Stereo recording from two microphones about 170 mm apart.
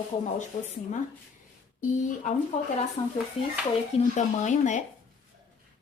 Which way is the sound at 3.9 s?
45° left (ahead or behind).